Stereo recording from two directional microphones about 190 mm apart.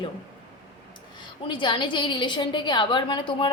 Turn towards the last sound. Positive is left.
turn(degrees=25)  # may be behind; listen again after turning